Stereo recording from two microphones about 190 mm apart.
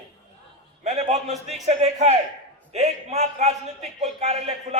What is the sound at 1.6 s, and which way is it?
A man's voice, 35° right (ahead or behind).